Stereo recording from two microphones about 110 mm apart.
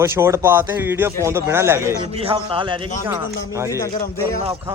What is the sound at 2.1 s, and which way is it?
Speech, 55° right (ahead or behind).